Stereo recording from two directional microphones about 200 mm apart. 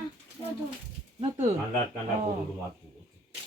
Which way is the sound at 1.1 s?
35° right (ahead or behind).